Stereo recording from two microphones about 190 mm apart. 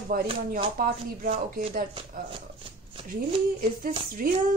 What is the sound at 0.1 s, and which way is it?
Speech, 50° right (ahead or behind).